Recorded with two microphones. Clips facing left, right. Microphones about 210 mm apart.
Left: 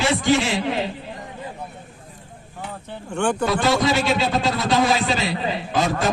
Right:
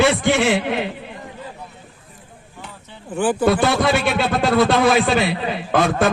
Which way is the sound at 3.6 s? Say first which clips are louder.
Right 2 dB; 60° right (ahead or behind).